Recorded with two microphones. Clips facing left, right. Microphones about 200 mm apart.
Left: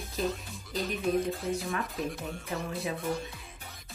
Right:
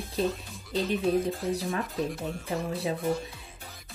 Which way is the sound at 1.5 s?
35° right (ahead or behind).